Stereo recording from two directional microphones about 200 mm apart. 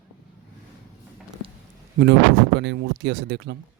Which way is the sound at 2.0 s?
60° right (ahead or behind).